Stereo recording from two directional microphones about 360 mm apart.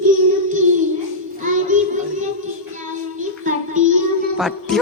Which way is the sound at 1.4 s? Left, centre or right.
Right.